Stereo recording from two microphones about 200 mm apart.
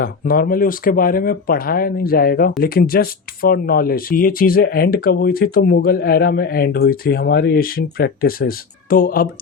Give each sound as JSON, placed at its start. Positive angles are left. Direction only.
{"t": 0.0, "sound": "speech", "side_deg": 45}